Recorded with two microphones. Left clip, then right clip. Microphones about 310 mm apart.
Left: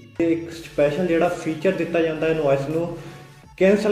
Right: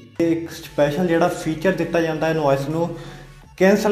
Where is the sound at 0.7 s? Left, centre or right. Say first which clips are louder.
Right 1 dB; right.